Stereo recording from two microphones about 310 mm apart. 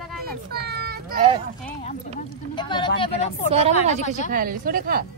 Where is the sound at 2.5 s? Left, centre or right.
Centre.